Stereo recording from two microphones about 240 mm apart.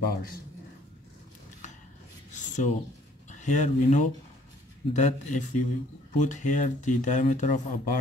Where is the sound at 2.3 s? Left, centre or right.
Left.